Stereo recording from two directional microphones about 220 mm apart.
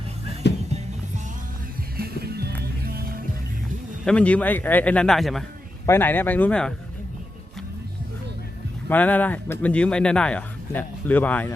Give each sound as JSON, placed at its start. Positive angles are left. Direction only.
{"t": 0.4, "sound": "music", "side_deg": 50}
{"t": 2.0, "sound": "music", "side_deg": -45}
{"t": 4.0, "sound": "speech", "side_deg": 5}
{"t": 8.9, "sound": "speech", "side_deg": 5}